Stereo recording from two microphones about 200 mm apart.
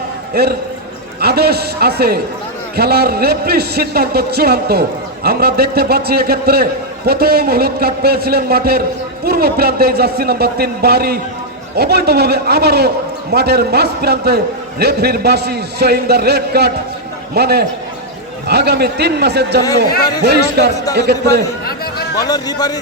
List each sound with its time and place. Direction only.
0.4 s a man's voice: 50° right (ahead or behind)
22.2 s a man's voice: 20° left (ahead or behind)